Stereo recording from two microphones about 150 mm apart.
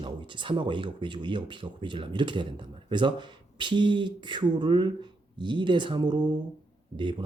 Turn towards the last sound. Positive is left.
turn(degrees=-30)  # may be behind; listen again after turning